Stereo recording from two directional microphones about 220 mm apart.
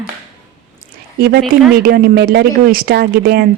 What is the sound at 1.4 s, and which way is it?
Speech, centre (ahead or behind).